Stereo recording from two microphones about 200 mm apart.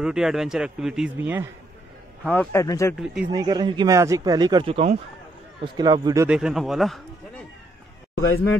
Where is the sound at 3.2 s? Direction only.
20° right (ahead or behind).